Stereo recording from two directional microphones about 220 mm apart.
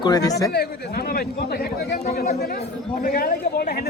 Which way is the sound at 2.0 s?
30° left (ahead or behind).